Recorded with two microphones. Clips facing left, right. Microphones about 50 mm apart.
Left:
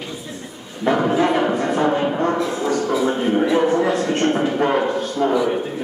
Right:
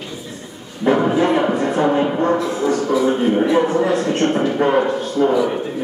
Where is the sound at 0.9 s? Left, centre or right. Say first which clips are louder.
Right 1 dB; centre.